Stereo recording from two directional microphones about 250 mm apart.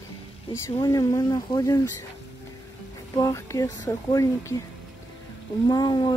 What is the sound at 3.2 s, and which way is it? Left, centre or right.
Speech, centre.